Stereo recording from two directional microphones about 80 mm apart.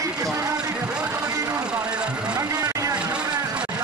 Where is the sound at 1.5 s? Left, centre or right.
Centre.